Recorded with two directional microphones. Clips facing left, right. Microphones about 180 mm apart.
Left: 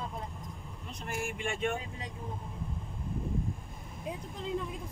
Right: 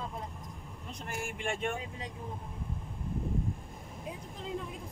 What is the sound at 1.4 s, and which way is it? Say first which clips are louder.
Speech: even; 50° right (ahead or behind).